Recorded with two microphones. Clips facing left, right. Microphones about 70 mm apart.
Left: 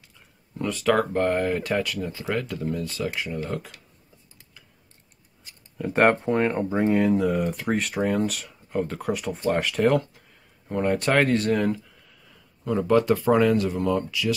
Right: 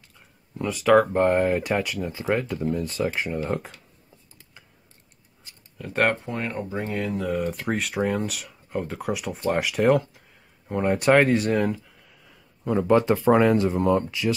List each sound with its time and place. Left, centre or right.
0.6 s speech: centre; by 3.7 s right
5.8 s speech: centre
6.2 s speech: left
7.2 s speech: centre; by 14.3 s right